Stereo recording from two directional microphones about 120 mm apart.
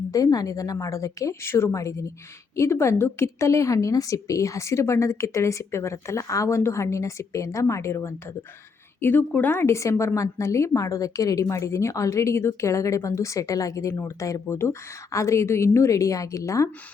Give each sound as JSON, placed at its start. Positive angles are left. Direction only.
{"t": 0.1, "sound": "speech", "side_deg": 30}